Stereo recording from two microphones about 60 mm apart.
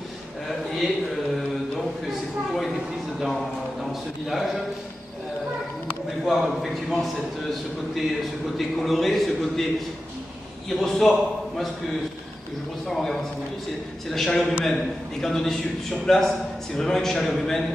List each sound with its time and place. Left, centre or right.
0.5 s a sound: centre
3.2 s a man's voice: centre
6.2 s a man's voice: centre
8.5 s a man's voice: centre
10.8 s a man's voice: centre
12.8 s a man's voice: centre